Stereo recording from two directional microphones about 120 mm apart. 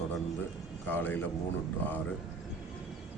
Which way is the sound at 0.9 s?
15° left (ahead or behind).